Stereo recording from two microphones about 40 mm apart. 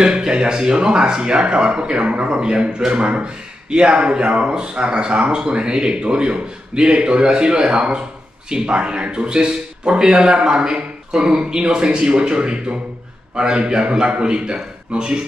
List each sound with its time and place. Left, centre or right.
0.0 s speech: right